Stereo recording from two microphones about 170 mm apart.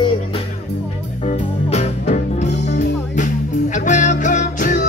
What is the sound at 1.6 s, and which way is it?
Music, 40° left (ahead or behind).